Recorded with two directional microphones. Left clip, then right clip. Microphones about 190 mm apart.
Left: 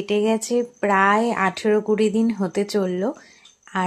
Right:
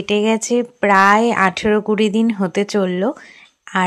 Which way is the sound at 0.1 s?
20° right (ahead or behind).